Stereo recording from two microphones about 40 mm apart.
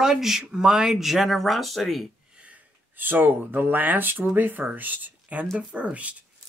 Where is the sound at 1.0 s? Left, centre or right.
Centre.